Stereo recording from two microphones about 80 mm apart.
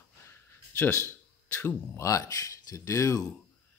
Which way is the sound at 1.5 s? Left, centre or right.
Left.